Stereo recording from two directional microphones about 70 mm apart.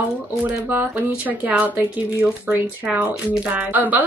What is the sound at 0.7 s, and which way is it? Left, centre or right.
Speech, right.